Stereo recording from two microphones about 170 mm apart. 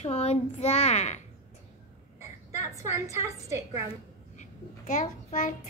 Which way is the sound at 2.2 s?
15° right (ahead or behind).